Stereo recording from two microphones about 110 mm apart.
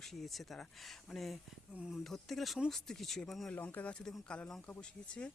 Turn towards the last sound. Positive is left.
turn(degrees=10)  # may be behind; listen again after turning